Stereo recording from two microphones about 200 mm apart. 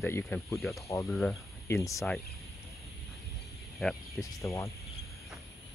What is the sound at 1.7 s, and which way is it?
Speech, 15° left (ahead or behind).